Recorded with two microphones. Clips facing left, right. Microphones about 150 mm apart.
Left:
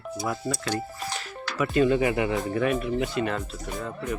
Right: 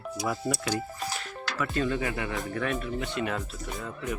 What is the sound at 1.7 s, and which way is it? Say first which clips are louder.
Speech: left 9 dB; 20° left (ahead or behind).